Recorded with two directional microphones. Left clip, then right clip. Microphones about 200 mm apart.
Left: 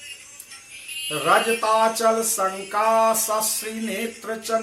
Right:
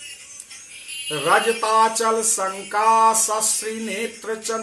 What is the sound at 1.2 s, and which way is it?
Speech, 15° right (ahead or behind).